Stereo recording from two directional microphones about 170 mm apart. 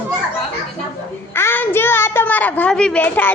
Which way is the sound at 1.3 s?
15° left (ahead or behind).